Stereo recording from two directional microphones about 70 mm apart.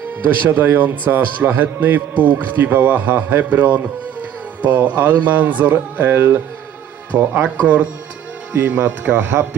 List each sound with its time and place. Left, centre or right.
0.4 s a man's voice: right
7.4 s a man's voice: right